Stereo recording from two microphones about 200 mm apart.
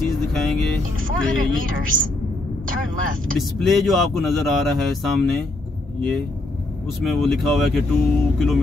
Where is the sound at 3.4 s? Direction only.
Centre (ahead or behind).